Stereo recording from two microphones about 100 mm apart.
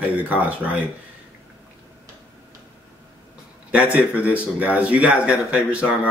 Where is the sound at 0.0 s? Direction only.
15° right (ahead or behind).